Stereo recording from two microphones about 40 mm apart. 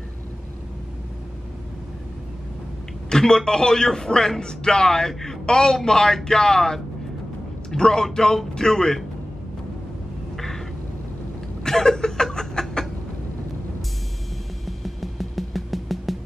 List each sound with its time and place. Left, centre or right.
3.1 s a man's voice: centre
10.3 s a sound: centre
11.6 s chuckle: centre
14.7 s music: centre